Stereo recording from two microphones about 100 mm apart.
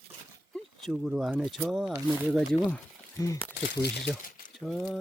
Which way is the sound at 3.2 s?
30° left (ahead or behind).